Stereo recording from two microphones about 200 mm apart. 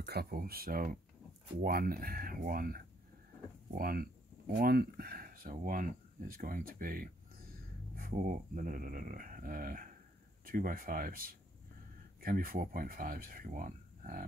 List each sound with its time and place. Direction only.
0.0 s speech: 55° right (ahead or behind)